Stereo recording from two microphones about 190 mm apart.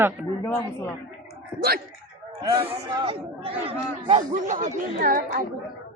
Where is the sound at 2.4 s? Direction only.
30° right (ahead or behind); by 5.4 s 50° right (ahead or behind).